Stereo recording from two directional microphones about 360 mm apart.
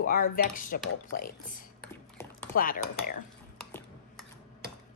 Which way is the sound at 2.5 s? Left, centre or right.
Left.